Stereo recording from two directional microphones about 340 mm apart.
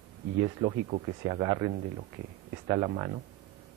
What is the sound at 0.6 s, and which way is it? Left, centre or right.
Speech, right.